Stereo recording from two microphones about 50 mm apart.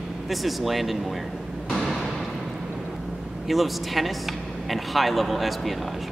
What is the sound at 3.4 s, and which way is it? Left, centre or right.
Speech, centre.